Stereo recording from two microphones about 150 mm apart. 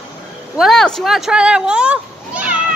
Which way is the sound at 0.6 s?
Centre (ahead or behind).